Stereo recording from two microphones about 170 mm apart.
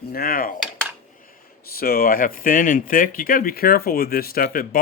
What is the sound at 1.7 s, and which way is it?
Speech, 60° left (ahead or behind).